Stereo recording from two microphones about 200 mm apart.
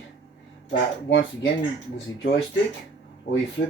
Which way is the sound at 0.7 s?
60° left (ahead or behind).